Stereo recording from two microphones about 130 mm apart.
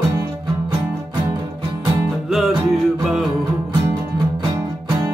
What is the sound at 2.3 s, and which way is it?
Music, centre (ahead or behind).